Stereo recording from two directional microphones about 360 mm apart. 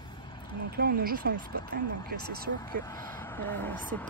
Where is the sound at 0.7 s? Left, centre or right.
Right.